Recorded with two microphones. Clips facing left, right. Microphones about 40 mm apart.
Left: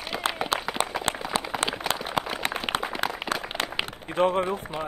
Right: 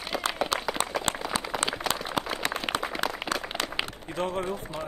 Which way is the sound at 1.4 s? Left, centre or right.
Centre.